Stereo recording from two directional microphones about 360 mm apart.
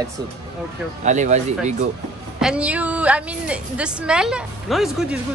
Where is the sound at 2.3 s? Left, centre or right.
Centre.